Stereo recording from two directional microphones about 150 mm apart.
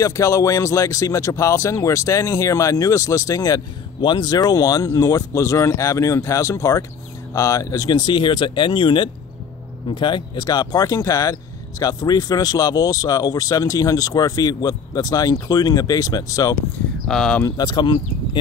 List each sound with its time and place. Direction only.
0.0 s speech: 20° left (ahead or behind)
17.1 s speech: 5° left (ahead or behind)
17.5 s speech: 30° left (ahead or behind)